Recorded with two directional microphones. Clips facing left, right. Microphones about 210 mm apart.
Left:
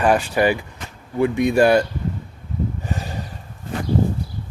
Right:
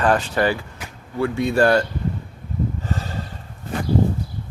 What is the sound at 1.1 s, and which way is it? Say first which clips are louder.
Speech: left 3 dB; 15° left (ahead or behind).